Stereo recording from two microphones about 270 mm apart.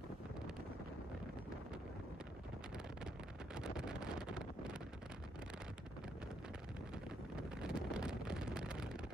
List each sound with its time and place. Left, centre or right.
3.5 s wind noise: centre
7.3 s wind noise: centre